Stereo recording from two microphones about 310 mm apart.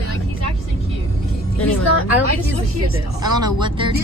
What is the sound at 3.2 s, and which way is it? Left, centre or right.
Speech, centre.